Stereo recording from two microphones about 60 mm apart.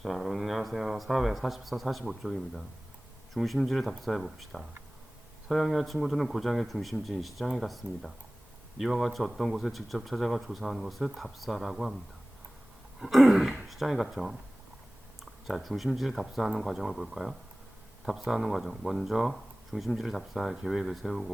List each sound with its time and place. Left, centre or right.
0.0 s speech: centre
13.0 s speech: centre